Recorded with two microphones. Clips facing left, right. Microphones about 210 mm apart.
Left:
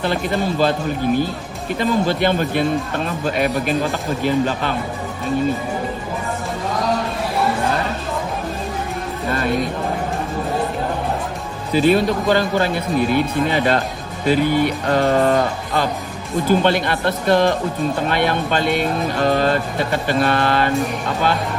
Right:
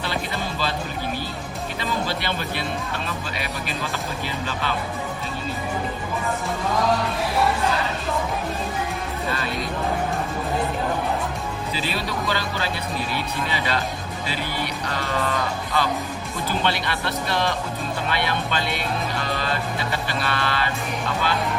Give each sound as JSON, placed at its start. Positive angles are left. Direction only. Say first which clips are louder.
{"t": 0.0, "sound": "speech", "louder": "left 8 dB", "side_deg": 50}
{"t": 1.8, "sound": "speech", "louder": "left 10 dB", "side_deg": 50}
{"t": 9.3, "sound": "speech", "louder": "left 11 dB", "side_deg": 50}
{"t": 11.7, "sound": "speech", "louder": "left 15 dB", "side_deg": 50}